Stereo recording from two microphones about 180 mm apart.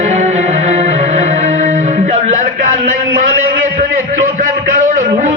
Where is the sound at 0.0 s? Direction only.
40° right (ahead or behind).